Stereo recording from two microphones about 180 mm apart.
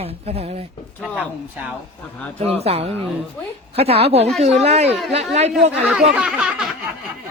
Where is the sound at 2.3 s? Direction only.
35° right (ahead or behind).